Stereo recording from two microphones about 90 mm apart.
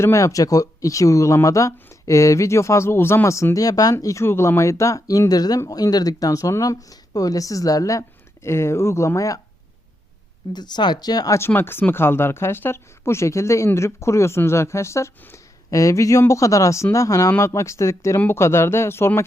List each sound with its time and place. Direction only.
0.0 s speech: 35° left (ahead or behind)
4.0 s speech: 30° left (ahead or behind)
8.4 s speech: 30° left (ahead or behind)
10.5 s speech: 55° left (ahead or behind)
11.3 s speech: 25° left (ahead or behind)